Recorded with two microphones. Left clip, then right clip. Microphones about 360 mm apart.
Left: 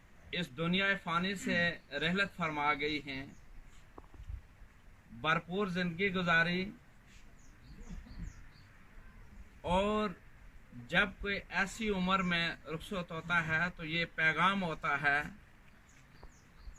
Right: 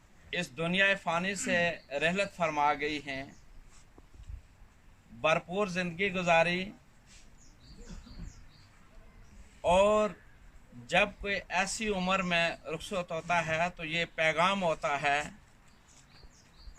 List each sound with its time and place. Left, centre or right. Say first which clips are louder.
0.3 s speech: right 3 dB; centre
5.2 s speech: right 4 dB; centre
9.6 s speech: right 8 dB; centre